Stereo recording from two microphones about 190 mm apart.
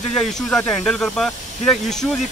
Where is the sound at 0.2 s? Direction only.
Centre (ahead or behind).